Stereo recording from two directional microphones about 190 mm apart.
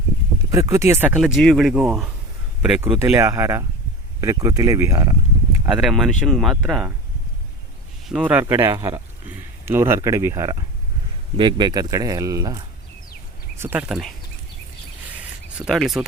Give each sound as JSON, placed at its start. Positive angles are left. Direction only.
{"t": 0.5, "sound": "speech", "side_deg": -15}
{"t": 5.6, "sound": "speech", "side_deg": 0}
{"t": 8.0, "sound": "speech", "side_deg": -5}
{"t": 15.5, "sound": "speech", "side_deg": 0}